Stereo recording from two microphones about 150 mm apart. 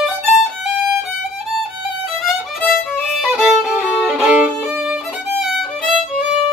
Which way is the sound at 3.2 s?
Centre (ahead or behind).